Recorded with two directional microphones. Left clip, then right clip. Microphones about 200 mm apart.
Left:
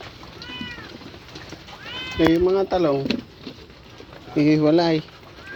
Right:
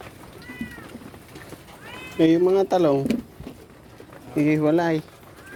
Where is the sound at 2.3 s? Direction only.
25° right (ahead or behind).